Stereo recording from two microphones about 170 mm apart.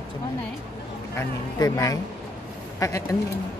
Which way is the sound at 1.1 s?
20° left (ahead or behind).